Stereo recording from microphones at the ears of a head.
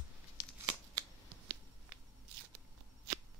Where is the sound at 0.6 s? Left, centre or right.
Right.